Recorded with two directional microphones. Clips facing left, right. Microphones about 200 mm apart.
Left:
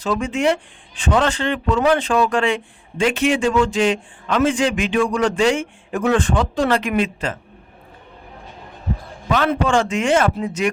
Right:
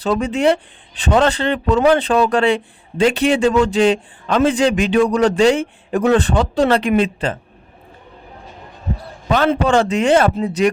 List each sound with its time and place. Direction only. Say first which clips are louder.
0.0 s speech: right 3 dB; 35° right (ahead or behind)
9.3 s speech: right 3 dB; 35° right (ahead or behind)